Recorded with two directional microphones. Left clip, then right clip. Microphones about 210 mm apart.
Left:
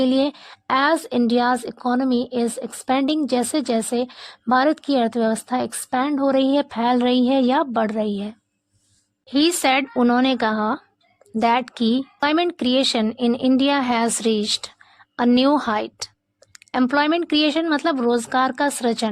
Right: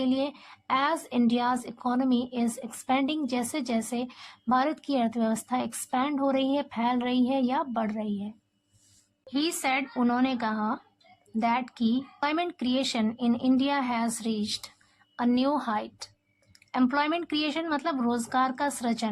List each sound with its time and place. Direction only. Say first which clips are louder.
0.0 s a woman's voice: left 9 dB; 40° left (ahead or behind)